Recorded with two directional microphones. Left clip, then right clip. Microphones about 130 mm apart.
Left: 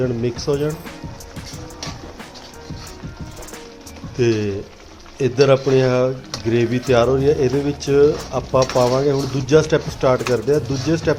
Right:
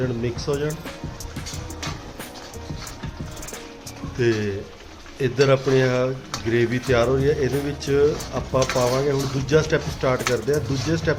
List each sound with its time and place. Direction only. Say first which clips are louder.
0.0 s speech: left 5 dB; 30° left (ahead or behind)
4.2 s speech: left 3 dB; 30° left (ahead or behind)